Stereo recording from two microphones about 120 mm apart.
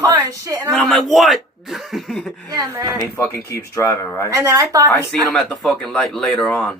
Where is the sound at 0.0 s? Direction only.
35° right (ahead or behind).